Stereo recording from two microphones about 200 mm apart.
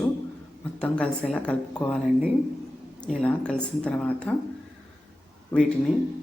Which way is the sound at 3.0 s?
5° left (ahead or behind).